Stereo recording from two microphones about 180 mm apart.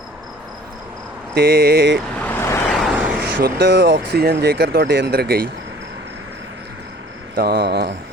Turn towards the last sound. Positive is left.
turn(degrees=-65)  # may be behind; listen again after turning